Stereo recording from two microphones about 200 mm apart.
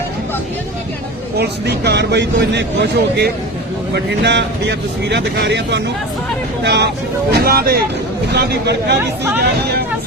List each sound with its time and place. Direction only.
1.4 s speech: 55° right (ahead or behind)